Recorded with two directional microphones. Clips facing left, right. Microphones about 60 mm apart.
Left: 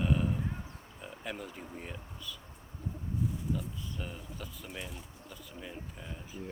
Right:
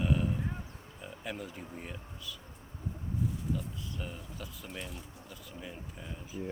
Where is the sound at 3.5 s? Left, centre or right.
Centre.